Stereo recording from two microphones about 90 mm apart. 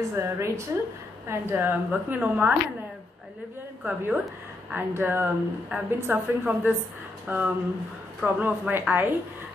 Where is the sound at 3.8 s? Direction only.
15° right (ahead or behind).